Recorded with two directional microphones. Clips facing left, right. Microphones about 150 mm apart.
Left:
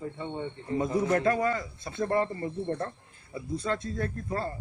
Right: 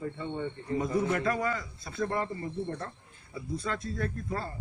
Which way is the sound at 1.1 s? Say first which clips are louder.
Left 4 dB; 35° left (ahead or behind).